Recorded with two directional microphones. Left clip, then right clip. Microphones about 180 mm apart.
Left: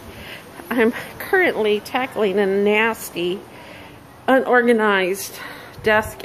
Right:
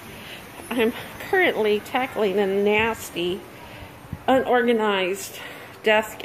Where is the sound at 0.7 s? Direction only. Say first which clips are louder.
Left 4 dB; 25° left (ahead or behind).